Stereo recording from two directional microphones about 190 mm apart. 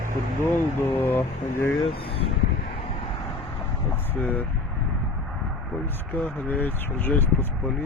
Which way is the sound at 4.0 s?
10° left (ahead or behind).